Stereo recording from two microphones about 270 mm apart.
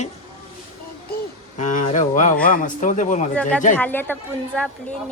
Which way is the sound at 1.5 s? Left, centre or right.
Left.